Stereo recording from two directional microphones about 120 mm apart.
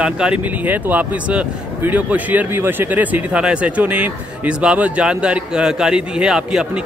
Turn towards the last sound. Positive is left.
turn(degrees=-5)  # may be behind; listen again after turning